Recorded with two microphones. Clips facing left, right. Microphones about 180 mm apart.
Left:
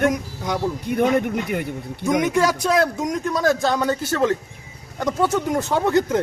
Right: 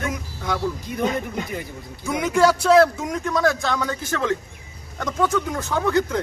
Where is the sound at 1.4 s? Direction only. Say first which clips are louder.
Left 6 dB; 65° left (ahead or behind).